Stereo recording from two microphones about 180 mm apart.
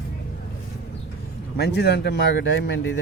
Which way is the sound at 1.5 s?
65° left (ahead or behind).